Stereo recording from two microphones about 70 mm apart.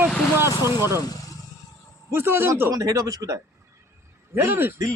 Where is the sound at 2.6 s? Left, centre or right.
Right.